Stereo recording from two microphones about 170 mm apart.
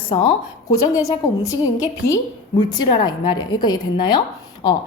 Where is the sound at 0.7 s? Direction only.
20° left (ahead or behind).